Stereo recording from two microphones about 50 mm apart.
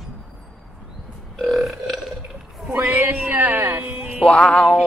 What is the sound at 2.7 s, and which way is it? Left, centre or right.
Speech, right.